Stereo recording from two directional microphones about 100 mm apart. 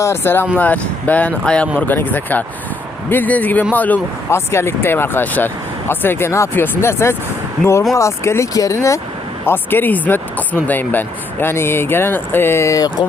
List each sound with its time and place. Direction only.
0.0 s speech: 25° left (ahead or behind)
4.3 s speech: 25° left (ahead or behind)
9.5 s speech: 20° left (ahead or behind)